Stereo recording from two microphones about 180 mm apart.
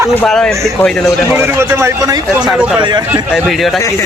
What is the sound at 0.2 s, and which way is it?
Speech, 5° left (ahead or behind).